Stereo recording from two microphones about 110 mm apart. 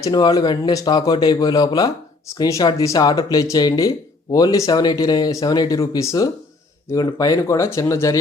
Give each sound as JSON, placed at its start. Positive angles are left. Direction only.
{"t": 0.0, "sound": "speech", "side_deg": 35}